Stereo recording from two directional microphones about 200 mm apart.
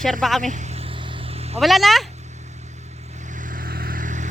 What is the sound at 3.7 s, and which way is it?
Vehicle, 45° right (ahead or behind).